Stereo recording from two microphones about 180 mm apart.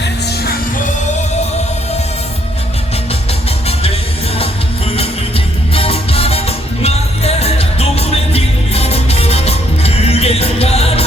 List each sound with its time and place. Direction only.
5.7 s music: 30° left (ahead or behind)